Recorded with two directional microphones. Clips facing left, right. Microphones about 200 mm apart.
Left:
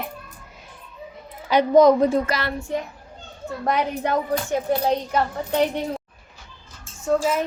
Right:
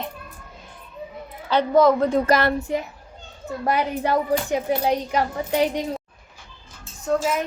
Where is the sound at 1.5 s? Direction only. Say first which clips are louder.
Left 3 dB; 15° left (ahead or behind).